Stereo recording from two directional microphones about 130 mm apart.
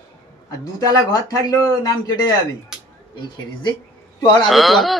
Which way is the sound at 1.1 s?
30° left (ahead or behind).